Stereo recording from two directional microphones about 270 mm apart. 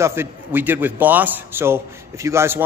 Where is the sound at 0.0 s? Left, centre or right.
Centre.